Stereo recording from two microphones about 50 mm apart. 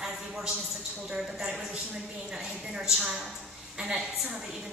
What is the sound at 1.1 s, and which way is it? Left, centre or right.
A woman's voice, centre.